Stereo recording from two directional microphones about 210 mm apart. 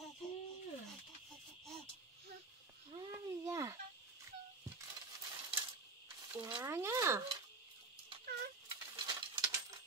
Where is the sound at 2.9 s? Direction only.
15° right (ahead or behind).